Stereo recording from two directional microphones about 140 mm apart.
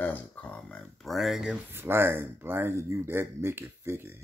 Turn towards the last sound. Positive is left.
turn(degrees=-15)  # may be behind; listen again after turning